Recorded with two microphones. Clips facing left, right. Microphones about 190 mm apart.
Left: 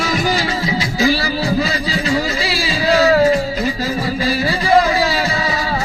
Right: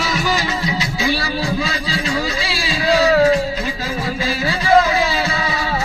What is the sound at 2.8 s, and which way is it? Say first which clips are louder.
Music: left 1 dB; centre (ahead or behind).